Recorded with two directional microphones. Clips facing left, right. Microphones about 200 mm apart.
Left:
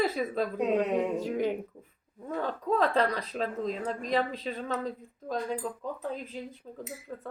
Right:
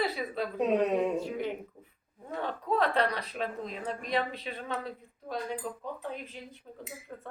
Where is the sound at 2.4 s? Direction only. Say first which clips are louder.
Left 2 dB; 40° left (ahead or behind).